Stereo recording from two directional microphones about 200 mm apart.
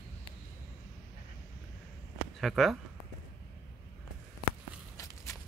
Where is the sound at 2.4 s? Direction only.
Centre (ahead or behind).